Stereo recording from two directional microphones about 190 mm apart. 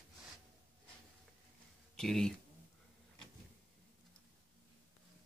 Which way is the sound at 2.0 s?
Centre (ahead or behind).